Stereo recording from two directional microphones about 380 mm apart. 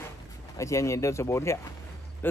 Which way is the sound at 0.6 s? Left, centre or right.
Centre.